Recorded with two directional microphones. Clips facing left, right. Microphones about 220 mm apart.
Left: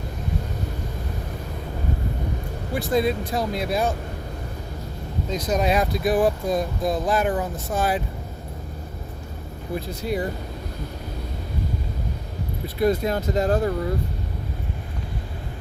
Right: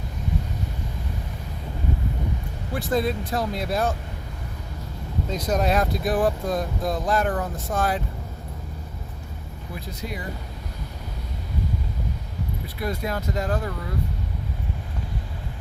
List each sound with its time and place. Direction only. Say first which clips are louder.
2.7 s speech: left 2 dB; centre (ahead or behind)
5.3 s speech: left 1 dB; 5° right (ahead or behind)
12.6 s speech: left 9 dB; 25° left (ahead or behind)